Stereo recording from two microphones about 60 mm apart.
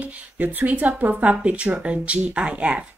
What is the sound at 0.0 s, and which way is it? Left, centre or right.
Speech, right.